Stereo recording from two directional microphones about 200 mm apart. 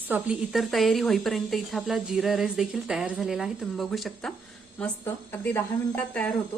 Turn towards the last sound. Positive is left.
turn(degrees=5)  # may be behind; listen again after turning